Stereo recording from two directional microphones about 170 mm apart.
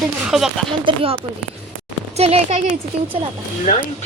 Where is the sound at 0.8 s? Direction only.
35° right (ahead or behind).